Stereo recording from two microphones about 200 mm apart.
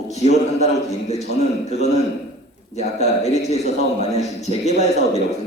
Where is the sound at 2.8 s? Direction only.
35° left (ahead or behind).